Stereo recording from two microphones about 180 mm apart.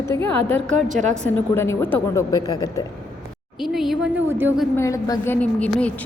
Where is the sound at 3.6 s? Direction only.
Centre (ahead or behind).